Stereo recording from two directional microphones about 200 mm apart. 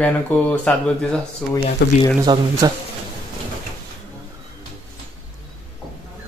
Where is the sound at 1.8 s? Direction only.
55° left (ahead or behind).